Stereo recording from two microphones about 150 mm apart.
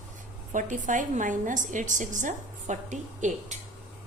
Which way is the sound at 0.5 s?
55° right (ahead or behind).